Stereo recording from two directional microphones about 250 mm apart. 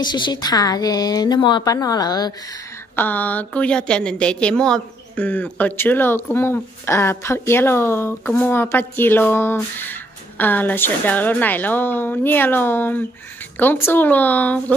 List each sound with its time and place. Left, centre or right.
0.0 s a woman's voice: centre